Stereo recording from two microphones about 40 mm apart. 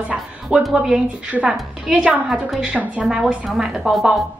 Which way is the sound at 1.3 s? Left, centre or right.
Right.